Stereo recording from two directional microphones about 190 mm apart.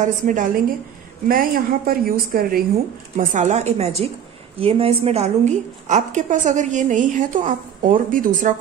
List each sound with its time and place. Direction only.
0.0 s a woman's voice: 40° right (ahead or behind)
3.2 s a woman's voice: 40° right (ahead or behind)